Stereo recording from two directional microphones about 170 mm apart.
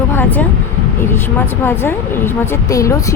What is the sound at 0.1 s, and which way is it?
Vehicle, 10° left (ahead or behind).